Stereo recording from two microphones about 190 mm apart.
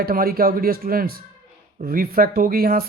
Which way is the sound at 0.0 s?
50° right (ahead or behind).